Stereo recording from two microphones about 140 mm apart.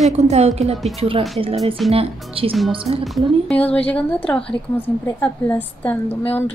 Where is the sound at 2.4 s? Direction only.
40° right (ahead or behind).